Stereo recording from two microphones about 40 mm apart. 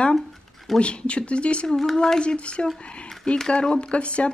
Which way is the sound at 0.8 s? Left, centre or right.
Left.